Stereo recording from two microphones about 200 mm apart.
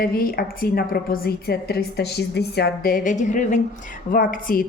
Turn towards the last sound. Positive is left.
turn(degrees=45)  # may be behind; listen again after turning